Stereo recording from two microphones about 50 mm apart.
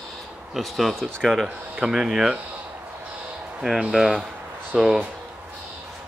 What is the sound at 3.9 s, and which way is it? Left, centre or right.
Speech, centre.